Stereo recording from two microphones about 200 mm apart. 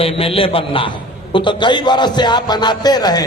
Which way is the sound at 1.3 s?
25° left (ahead or behind).